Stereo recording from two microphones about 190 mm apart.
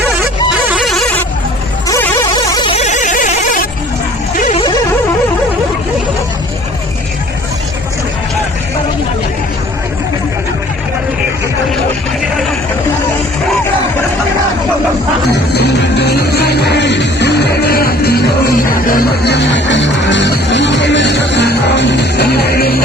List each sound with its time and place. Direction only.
0.5 s music: 5° right (ahead or behind)
1.9 s music: 15° left (ahead or behind)
2.7 s a sound: 40° left (ahead or behind)
4.4 s music: 40° left (ahead or behind)
15.5 s music: 60° left (ahead or behind)